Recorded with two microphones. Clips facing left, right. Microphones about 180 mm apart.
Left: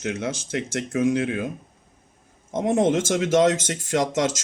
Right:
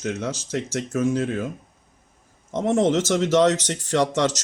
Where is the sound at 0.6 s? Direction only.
15° left (ahead or behind).